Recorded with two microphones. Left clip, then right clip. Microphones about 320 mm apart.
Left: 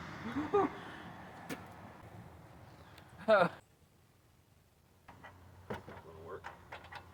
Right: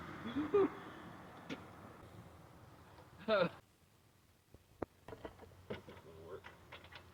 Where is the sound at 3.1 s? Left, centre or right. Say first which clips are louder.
Left 7 dB; centre.